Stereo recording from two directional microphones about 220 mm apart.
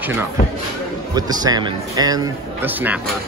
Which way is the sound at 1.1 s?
15° right (ahead or behind).